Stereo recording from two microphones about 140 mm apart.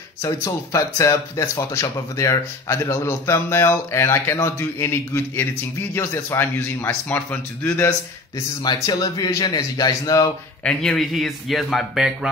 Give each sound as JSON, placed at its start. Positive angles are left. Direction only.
{"t": 0.2, "sound": "a man's voice", "side_deg": 20}
{"t": 8.6, "sound": "speech", "side_deg": 25}
{"t": 10.6, "sound": "speech", "side_deg": 5}